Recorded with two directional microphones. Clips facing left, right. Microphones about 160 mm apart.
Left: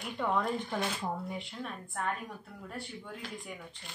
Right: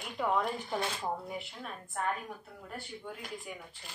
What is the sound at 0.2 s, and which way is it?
Speech, 10° right (ahead or behind).